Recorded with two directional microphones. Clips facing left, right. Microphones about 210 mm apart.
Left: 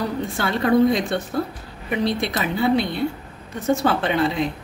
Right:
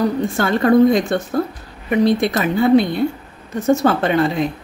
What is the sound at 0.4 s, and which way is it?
A woman's voice, 50° right (ahead or behind).